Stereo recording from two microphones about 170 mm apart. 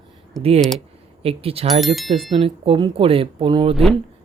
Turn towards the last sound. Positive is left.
turn(degrees=0)  # may be behind; listen again after turning